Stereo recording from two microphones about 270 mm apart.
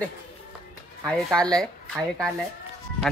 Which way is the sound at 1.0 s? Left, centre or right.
Centre.